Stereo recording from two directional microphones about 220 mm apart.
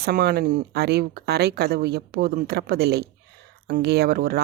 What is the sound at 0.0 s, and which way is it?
Speech, 45° right (ahead or behind).